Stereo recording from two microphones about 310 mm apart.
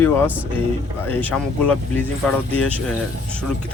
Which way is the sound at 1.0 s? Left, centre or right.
Centre.